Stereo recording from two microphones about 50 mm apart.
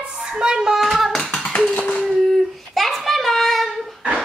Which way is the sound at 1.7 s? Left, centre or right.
Left.